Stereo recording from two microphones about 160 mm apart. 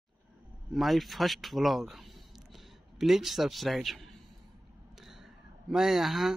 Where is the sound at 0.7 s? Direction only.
Centre (ahead or behind).